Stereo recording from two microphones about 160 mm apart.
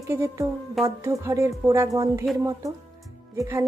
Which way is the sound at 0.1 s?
15° right (ahead or behind).